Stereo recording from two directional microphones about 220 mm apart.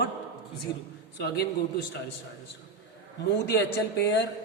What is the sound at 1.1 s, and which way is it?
Speech, 50° left (ahead or behind).